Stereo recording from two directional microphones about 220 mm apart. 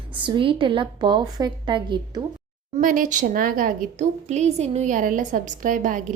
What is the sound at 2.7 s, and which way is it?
A woman's voice, 35° right (ahead or behind).